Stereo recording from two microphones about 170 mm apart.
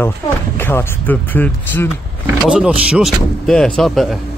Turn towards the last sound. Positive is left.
turn(degrees=0)  # may be behind; listen again after turning